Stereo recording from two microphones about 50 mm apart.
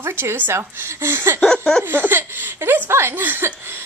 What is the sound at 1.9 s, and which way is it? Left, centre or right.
Speech, right.